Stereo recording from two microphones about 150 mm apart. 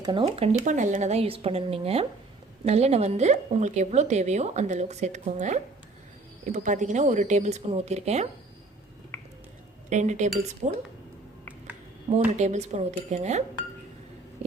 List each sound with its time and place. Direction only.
0.0 s a woman's voice: 30° right (ahead or behind)
9.9 s a woman's voice: 55° right (ahead or behind)
12.4 s a woman's voice: 50° right (ahead or behind)